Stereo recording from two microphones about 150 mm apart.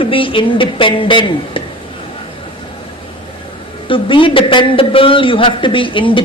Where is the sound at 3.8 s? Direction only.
35° left (ahead or behind).